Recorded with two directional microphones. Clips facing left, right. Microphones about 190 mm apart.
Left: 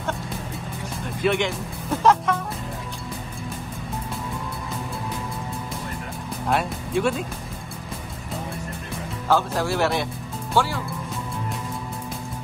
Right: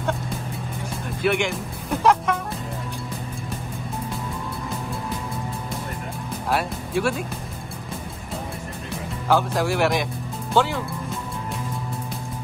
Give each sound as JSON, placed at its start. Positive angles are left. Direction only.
{"t": 1.0, "sound": "music", "side_deg": -5}
{"t": 6.5, "sound": "speech", "side_deg": -5}
{"t": 9.3, "sound": "speech", "side_deg": -15}